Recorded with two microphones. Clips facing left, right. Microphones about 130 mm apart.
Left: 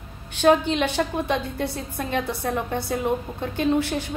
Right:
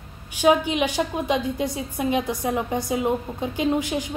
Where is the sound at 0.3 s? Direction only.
10° right (ahead or behind).